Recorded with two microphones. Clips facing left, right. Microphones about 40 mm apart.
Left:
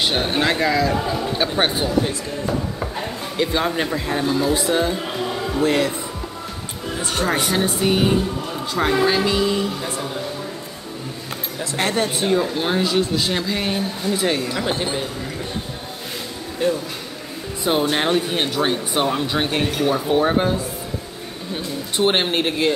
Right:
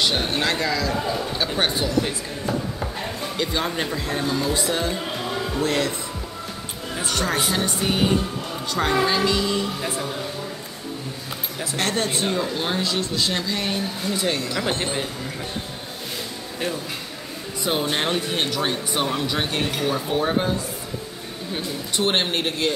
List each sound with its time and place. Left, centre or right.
0.0 s speech: centre
3.3 s speech: centre
7.1 s speech: left
7.8 s speech: centre
9.8 s speech: centre
11.7 s speech: centre
17.9 s speech: centre
21.9 s speech: centre